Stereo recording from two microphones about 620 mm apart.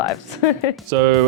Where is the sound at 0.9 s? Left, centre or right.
Right.